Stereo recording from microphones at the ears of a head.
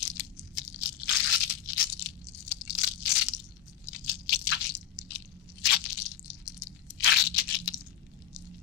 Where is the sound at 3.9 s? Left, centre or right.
Left.